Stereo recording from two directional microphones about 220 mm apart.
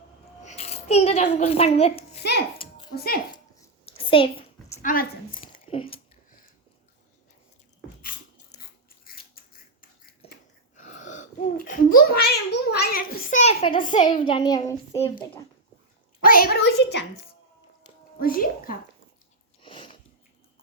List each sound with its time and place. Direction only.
0.4 s a child's voice: 30° left (ahead or behind)
2.6 s a sound: 20° left (ahead or behind)
2.9 s a woman's voice: 45° left (ahead or behind)
3.8 s a sound: 25° left (ahead or behind)
4.8 s speech: 40° left (ahead or behind)
5.7 s a child's voice: 25° left (ahead or behind)
8.5 s biting: 30° left (ahead or behind)
10.2 s a sound: 25° left (ahead or behind); by 12.4 s 45° left (ahead or behind)
12.5 s a woman's voice: 50° left (ahead or behind)
13.4 s a child's voice: 25° left (ahead or behind)
16.2 s a woman's voice: 40° left (ahead or behind)
18.2 s speech: 40° left (ahead or behind)
19.6 s sniff: 25° left (ahead or behind)